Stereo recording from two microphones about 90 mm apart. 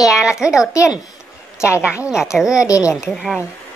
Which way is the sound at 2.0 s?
5° right (ahead or behind).